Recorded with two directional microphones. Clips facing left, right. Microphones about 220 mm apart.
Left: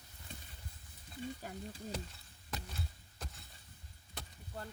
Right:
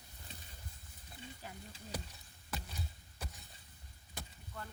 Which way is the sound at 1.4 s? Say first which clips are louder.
Left 6 dB; 45° left (ahead or behind).